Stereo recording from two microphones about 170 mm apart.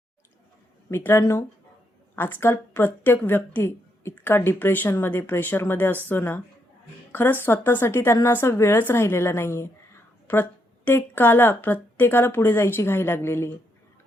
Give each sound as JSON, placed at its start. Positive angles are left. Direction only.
{"t": 0.9, "sound": "speech", "side_deg": 15}